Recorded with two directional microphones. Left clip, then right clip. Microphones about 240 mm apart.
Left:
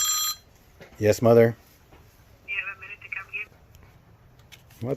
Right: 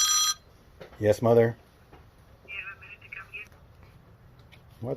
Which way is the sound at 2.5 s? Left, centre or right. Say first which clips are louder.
Left 6 dB; left.